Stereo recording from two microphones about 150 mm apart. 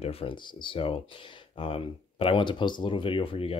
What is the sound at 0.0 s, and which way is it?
Speech, 40° left (ahead or behind).